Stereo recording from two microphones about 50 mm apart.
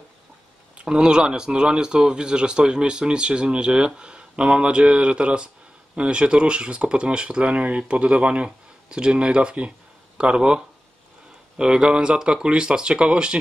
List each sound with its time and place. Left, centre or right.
0.7 s speech: centre